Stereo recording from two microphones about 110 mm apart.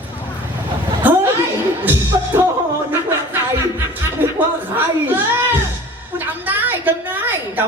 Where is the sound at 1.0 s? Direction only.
15° right (ahead or behind).